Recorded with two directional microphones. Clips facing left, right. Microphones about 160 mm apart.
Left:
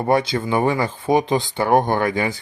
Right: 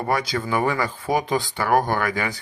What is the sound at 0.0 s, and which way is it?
Speech, 25° left (ahead or behind).